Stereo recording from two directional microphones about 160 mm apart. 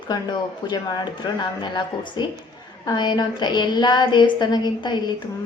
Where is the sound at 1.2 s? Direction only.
30° left (ahead or behind).